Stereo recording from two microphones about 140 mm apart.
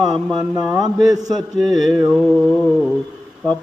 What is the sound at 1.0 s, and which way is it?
Mantra, 25° right (ahead or behind).